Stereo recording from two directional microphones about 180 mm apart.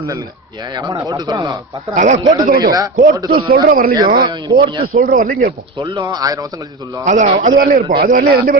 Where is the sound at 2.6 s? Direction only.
20° right (ahead or behind).